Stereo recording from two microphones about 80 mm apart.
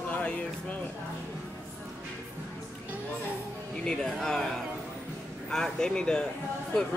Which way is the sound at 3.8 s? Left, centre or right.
Centre.